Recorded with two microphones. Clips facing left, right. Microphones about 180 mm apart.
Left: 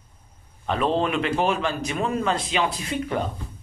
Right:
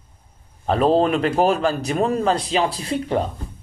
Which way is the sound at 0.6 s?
35° right (ahead or behind).